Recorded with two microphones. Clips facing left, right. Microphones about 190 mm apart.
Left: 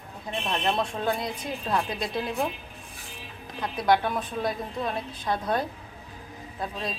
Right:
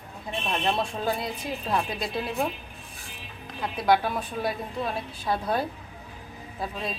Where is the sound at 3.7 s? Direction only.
5° right (ahead or behind).